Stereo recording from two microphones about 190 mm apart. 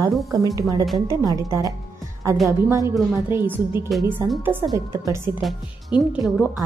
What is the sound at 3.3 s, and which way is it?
A woman's voice, 10° right (ahead or behind).